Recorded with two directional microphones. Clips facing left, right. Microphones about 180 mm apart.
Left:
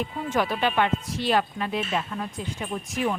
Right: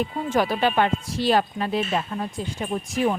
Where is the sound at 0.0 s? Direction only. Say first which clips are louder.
Right 3 dB; 35° right (ahead or behind).